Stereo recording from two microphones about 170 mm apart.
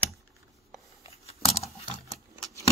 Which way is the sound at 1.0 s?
35° left (ahead or behind).